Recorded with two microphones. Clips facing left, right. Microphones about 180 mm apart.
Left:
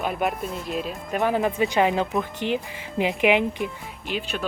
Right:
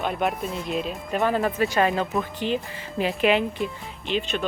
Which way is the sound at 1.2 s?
15° left (ahead or behind).